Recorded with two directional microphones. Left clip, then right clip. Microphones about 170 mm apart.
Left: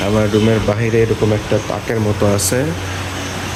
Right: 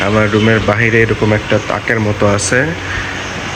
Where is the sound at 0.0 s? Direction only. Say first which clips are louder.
Right 3 dB; 5° left (ahead or behind).